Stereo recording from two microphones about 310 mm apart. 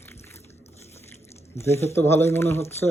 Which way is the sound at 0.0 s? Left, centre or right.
Centre.